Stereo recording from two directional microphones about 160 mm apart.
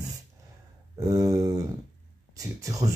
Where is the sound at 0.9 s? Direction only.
20° right (ahead or behind).